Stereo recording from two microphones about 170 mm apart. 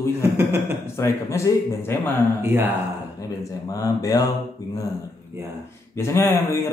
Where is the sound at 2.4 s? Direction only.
15° right (ahead or behind).